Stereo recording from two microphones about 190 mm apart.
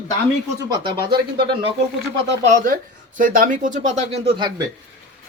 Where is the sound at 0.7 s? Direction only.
25° right (ahead or behind).